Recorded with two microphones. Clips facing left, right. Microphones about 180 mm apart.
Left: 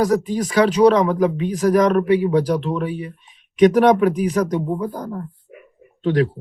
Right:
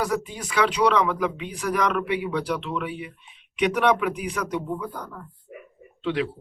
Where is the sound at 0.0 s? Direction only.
40° left (ahead or behind).